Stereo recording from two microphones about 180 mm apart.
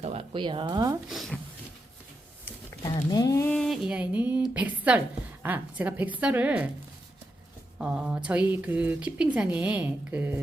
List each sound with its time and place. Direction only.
0.0 s speech: 35° right (ahead or behind)
1.1 s speech: centre (ahead or behind)
2.4 s a sound: 20° left (ahead or behind)
3.5 s a woman's voice: centre (ahead or behind)
7.8 s a woman's voice: 5° right (ahead or behind)